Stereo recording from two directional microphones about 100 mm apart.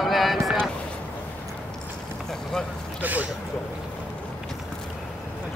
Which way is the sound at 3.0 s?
15° right (ahead or behind).